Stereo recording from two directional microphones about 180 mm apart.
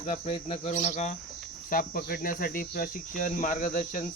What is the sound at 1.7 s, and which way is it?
Speech, 55° left (ahead or behind).